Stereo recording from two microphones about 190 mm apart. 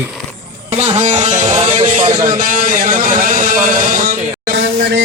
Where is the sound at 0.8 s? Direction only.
35° right (ahead or behind).